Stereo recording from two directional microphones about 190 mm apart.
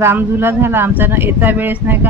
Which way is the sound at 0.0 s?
10° right (ahead or behind).